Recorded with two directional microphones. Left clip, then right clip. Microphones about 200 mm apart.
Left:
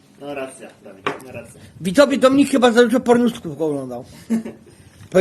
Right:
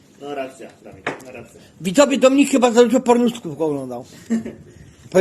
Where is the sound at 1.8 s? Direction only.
15° left (ahead or behind).